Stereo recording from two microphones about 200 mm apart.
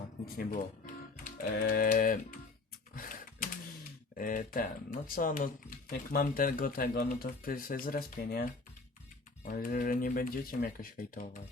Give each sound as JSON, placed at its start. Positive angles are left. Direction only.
{"t": 1.2, "sound": "speech", "side_deg": 45}
{"t": 2.9, "sound": "typing", "side_deg": 45}
{"t": 4.2, "sound": "speech", "side_deg": 40}
{"t": 9.4, "sound": "speech", "side_deg": 45}